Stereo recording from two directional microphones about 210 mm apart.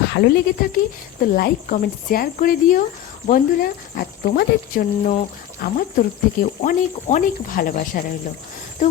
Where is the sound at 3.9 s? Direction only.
45° left (ahead or behind).